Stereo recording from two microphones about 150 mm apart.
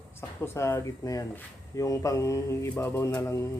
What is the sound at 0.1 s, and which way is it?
Mantra, 15° left (ahead or behind).